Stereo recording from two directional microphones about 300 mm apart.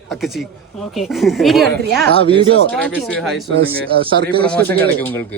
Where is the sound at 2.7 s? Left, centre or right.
Centre.